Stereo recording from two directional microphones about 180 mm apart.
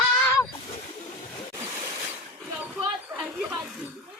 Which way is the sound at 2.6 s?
Centre (ahead or behind).